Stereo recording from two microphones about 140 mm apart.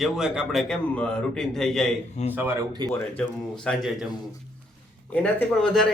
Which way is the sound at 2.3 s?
15° right (ahead or behind).